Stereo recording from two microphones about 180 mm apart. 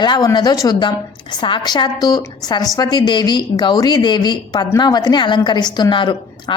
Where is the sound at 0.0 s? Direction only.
25° left (ahead or behind).